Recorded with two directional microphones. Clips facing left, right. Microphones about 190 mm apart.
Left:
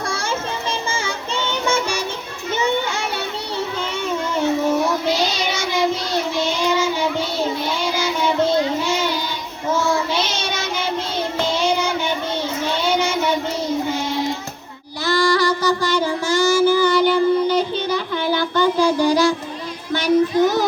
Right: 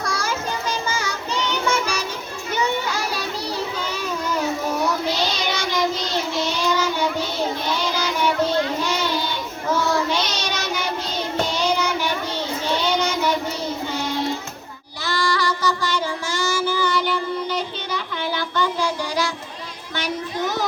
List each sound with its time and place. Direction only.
0.0 s music: 25° left (ahead or behind)
2.5 s child singing: 25° left (ahead or behind)
10.3 s child singing: 25° left (ahead or behind)
15.0 s child singing: 40° left (ahead or behind)